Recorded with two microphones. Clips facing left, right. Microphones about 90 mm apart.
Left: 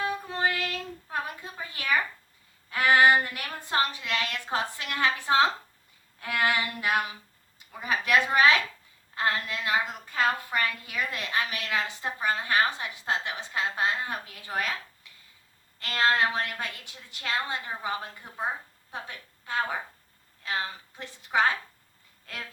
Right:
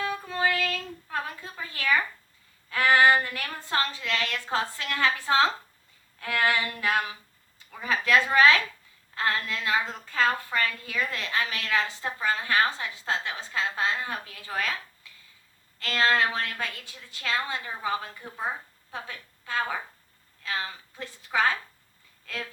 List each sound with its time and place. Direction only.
0.0 s child singing: 20° left (ahead or behind)
2.6 s a woman's voice: 20° left (ahead or behind)
15.8 s a woman's voice: 20° left (ahead or behind)